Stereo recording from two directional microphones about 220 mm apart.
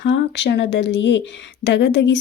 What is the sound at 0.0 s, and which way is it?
Speech, 55° left (ahead or behind).